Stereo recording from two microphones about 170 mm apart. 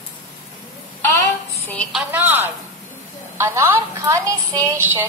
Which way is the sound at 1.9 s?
10° right (ahead or behind).